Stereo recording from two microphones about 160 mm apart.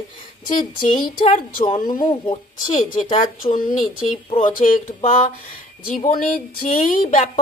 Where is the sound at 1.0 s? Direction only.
55° left (ahead or behind).